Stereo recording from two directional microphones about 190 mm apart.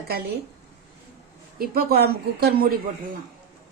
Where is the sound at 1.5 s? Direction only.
55° right (ahead or behind).